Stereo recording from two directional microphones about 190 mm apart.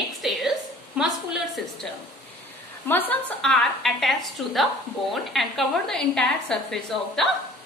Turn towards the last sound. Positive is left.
turn(degrees=0)  # may be behind; listen again after turning